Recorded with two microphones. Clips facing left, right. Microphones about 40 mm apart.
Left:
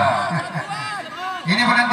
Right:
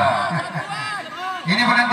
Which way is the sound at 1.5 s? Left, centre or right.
Centre.